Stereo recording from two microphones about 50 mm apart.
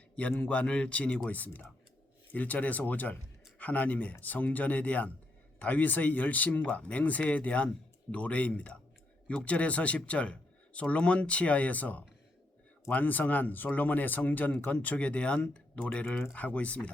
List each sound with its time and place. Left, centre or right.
0.2 s speech: left